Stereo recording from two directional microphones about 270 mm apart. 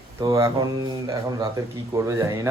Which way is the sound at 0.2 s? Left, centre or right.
Centre.